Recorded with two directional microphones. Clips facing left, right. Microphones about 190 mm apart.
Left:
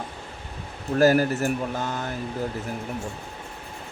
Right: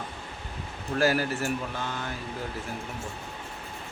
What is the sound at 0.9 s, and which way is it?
Speech, 45° left (ahead or behind).